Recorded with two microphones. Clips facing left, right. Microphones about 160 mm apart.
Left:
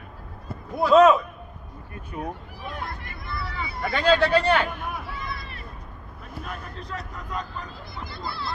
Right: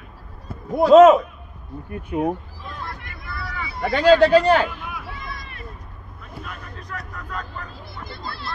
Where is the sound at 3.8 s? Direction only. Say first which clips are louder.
Right 6 dB; 35° right (ahead or behind).